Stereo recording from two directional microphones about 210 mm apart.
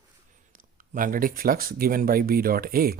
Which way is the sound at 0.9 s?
40° right (ahead or behind).